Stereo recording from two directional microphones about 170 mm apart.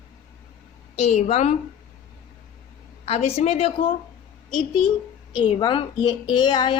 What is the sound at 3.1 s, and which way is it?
Speech, 40° left (ahead or behind).